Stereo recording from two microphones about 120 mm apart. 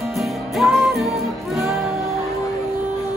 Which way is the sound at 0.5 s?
Centre (ahead or behind).